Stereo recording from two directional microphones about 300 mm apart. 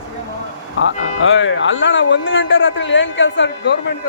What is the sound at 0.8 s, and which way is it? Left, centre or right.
A man's voice, left.